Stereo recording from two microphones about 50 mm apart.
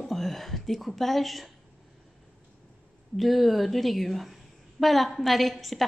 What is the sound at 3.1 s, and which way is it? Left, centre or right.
A woman's voice, centre.